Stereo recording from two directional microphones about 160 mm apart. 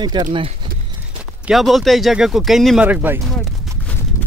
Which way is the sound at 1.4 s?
Centre (ahead or behind).